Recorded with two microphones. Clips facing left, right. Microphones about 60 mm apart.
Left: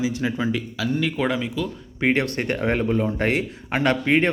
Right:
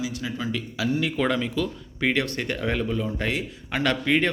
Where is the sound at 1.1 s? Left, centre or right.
Centre.